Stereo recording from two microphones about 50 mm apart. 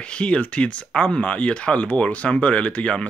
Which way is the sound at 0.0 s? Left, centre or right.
Left.